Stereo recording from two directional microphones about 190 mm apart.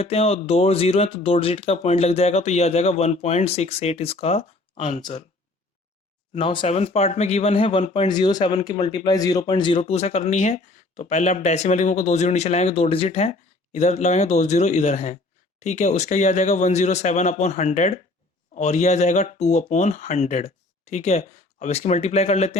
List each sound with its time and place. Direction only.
0.0 s speech: 30° left (ahead or behind)
6.3 s speech: 30° left (ahead or behind)
8.0 s speech: 20° left (ahead or behind)